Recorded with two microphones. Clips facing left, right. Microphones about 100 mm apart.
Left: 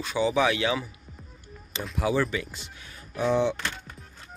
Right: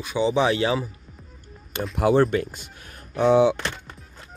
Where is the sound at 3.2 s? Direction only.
85° right.